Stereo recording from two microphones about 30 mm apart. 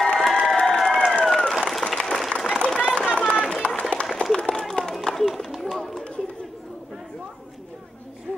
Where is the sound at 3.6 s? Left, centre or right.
Left.